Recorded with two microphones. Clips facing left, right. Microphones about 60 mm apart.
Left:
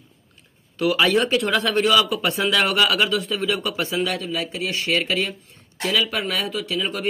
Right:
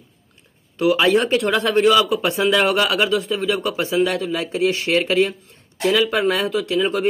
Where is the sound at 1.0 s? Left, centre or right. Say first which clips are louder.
Right 3 dB; right.